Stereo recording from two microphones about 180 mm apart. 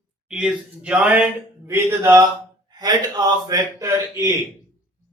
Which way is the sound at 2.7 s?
20° right (ahead or behind).